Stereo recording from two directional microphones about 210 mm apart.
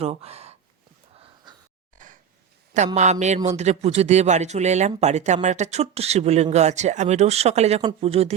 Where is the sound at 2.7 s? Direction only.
35° right (ahead or behind).